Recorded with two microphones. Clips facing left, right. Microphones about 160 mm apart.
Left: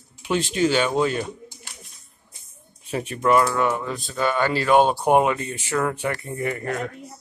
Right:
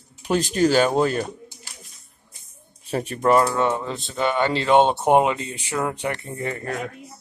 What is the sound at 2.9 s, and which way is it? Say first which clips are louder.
Speech: right 1 dB; 40° right (ahead or behind).